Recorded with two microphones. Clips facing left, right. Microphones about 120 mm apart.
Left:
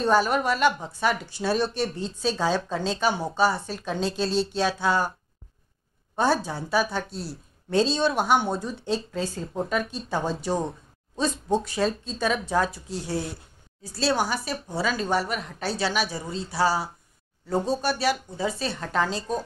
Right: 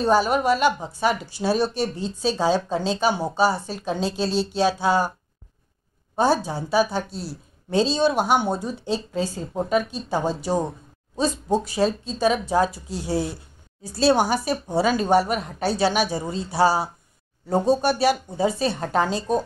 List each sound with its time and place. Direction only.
0.0 s speech: 5° right (ahead or behind)
4.6 s speech: 30° right (ahead or behind)
6.4 s speech: 5° right (ahead or behind)
6.8 s speech: 30° right (ahead or behind)
7.1 s a woman's voice: 5° right (ahead or behind); by 18.7 s 20° right (ahead or behind)
18.7 s speech: 30° right (ahead or behind)
19.0 s speech: 15° right (ahead or behind)